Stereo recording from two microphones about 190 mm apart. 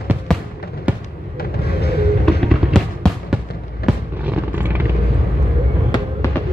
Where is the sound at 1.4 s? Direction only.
55° left (ahead or behind).